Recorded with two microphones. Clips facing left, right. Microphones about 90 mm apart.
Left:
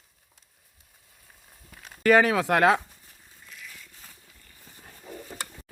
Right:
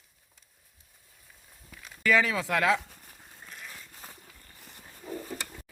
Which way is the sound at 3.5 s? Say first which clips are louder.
Even; 40° right (ahead or behind).